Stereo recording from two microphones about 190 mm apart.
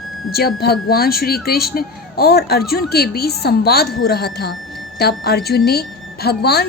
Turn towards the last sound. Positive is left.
turn(degrees=55)  # may be behind; listen again after turning